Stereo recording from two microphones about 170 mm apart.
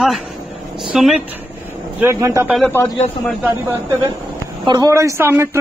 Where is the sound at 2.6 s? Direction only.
15° left (ahead or behind).